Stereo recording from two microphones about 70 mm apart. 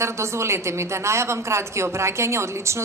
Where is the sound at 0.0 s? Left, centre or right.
Right.